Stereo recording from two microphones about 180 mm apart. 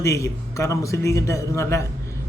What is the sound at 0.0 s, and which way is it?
Speech, 15° left (ahead or behind).